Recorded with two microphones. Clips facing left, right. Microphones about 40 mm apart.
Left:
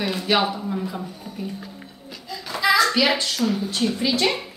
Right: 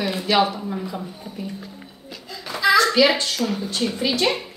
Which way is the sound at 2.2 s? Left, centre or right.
Centre.